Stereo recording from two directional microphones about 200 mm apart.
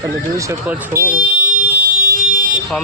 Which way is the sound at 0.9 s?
45° right (ahead or behind).